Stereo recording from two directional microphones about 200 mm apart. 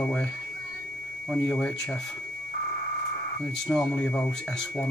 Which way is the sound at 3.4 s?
5° left (ahead or behind).